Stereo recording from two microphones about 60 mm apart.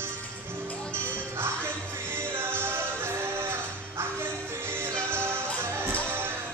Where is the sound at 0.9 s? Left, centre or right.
Right.